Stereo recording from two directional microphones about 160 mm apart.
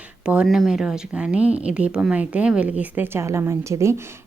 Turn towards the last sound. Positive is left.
turn(degrees=-15)  # may be behind; listen again after turning